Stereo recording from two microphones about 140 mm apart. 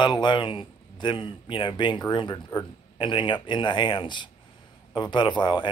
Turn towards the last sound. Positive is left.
turn(degrees=35)  # may be behind; listen again after turning